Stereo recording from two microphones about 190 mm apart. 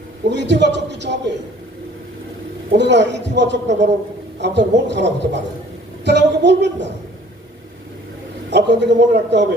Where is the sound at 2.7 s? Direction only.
65° right (ahead or behind).